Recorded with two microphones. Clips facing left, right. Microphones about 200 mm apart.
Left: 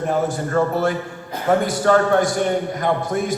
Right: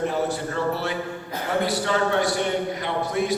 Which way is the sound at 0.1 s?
50° left (ahead or behind).